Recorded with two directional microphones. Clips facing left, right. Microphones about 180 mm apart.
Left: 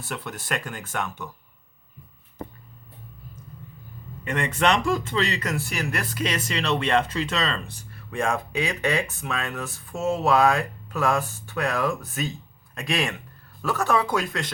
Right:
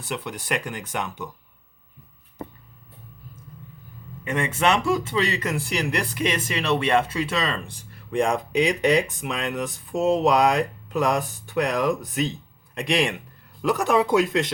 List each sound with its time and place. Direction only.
0.1 s speech: 15° right (ahead or behind)
4.2 s speech: 10° right (ahead or behind)